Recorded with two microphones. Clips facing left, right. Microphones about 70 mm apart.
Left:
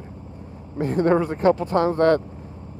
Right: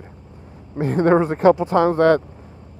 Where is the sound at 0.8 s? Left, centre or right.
Right.